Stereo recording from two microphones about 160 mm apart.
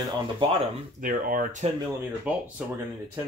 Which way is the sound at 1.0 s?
65° right (ahead or behind).